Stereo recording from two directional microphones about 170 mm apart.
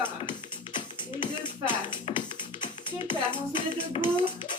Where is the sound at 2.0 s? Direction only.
30° left (ahead or behind).